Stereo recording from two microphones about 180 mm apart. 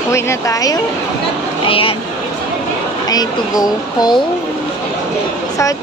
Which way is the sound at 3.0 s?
20° left (ahead or behind).